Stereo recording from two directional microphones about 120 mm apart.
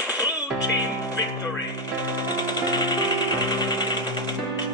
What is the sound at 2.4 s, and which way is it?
Music, 35° left (ahead or behind).